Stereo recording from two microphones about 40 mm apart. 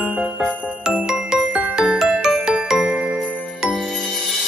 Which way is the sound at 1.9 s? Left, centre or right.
Centre.